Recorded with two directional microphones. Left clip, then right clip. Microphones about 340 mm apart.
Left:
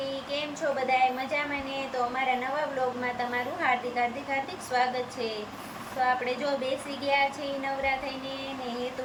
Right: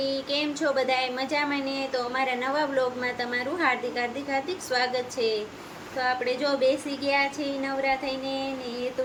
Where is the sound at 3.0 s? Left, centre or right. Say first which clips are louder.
Right 1 dB; centre.